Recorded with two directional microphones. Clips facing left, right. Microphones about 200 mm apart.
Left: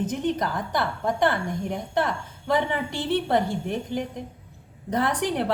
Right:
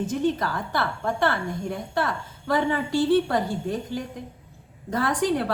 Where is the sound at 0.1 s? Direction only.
20° left (ahead or behind).